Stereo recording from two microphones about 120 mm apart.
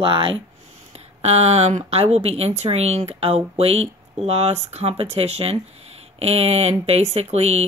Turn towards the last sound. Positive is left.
turn(degrees=-60)  # may be behind; listen again after turning